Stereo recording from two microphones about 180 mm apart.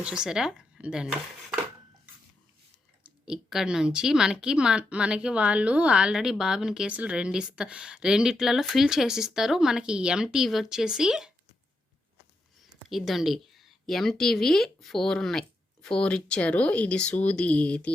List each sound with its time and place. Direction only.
0.0 s speech: 5° right (ahead or behind)
3.0 s speech: 5° right (ahead or behind)
12.9 s speech: centre (ahead or behind)